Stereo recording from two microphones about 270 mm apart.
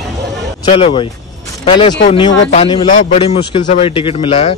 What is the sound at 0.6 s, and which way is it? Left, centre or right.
A man's voice, centre.